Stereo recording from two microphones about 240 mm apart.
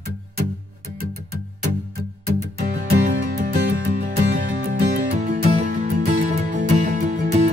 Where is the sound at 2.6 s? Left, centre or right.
Right.